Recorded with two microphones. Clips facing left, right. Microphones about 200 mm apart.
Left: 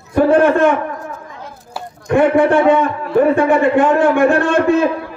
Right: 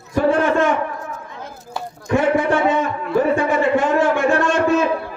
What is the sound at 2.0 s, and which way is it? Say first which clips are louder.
A man's voice: left 5 dB; 55° left (ahead or behind).